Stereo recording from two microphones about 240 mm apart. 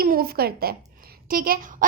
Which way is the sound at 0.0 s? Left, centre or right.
Right.